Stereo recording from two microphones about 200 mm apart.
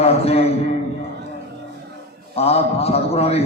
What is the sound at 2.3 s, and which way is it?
A man's voice, 30° left (ahead or behind).